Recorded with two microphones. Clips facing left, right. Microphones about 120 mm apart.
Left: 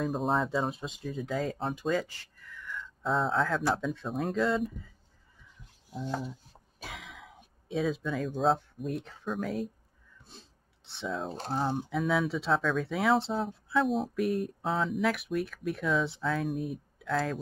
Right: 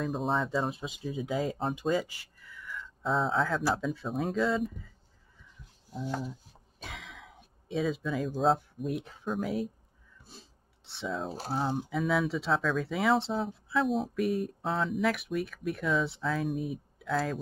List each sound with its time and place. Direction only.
0.0 s speech: centre (ahead or behind)
6.8 s speech: centre (ahead or behind)